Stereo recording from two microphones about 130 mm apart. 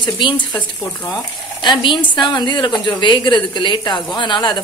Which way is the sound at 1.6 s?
35° left (ahead or behind).